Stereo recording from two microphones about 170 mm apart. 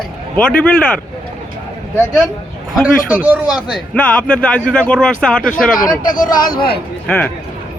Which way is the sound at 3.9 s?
5° left (ahead or behind).